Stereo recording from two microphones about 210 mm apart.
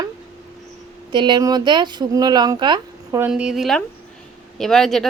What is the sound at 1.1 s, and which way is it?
Speech, 20° right (ahead or behind).